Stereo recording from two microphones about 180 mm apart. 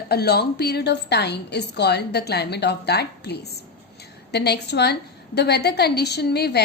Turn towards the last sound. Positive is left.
turn(degrees=65)  # may be behind; listen again after turning